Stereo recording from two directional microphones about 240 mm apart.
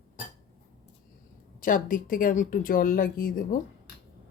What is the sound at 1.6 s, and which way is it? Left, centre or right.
Speech, left.